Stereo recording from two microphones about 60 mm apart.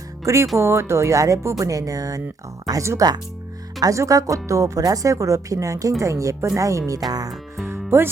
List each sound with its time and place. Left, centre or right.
0.5 s speech: right
2.7 s speech: right
3.8 s speech: right
7.6 s music: right